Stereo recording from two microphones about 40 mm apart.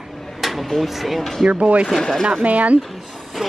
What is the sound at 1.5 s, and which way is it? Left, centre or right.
Speech, right.